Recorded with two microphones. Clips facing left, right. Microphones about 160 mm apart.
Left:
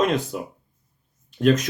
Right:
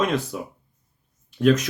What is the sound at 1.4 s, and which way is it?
Speech, 40° left (ahead or behind).